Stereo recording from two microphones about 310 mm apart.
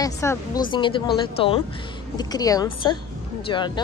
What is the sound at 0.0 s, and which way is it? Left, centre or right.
Speech, centre.